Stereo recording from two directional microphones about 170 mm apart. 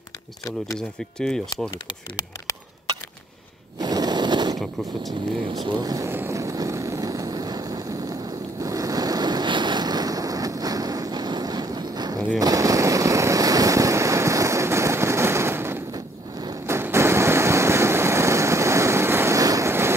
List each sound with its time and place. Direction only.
0.7 s speech: 5° left (ahead or behind)
3.8 s a sound: 25° right (ahead or behind)
5.6 s vehicle: 25° right (ahead or behind)